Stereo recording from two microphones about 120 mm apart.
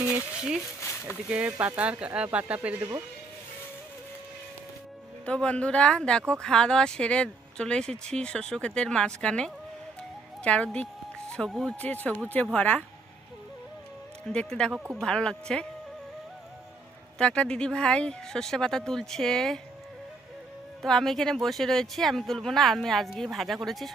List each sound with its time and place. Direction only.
0.0 s a sound: 10° right (ahead or behind)
0.8 s a sound: 25° left (ahead or behind)
1.3 s speech: 10° right (ahead or behind)
5.2 s speech: 10° left (ahead or behind)
10.0 s music: 10° left (ahead or behind)
11.3 s speech: 5° left (ahead or behind)
14.3 s speech: 5° left (ahead or behind)
17.2 s speech: 10° left (ahead or behind)
20.8 s speech: 5° left (ahead or behind)